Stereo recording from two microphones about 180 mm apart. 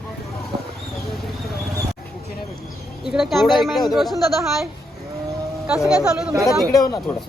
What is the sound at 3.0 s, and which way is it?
Speech, centre (ahead or behind).